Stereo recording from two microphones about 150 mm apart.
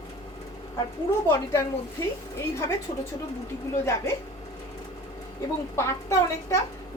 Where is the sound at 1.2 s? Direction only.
20° left (ahead or behind).